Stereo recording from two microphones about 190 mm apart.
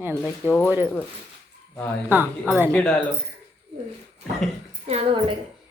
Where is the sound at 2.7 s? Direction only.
5° left (ahead or behind).